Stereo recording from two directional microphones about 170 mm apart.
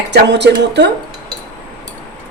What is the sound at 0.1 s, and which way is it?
Speech, 85° right.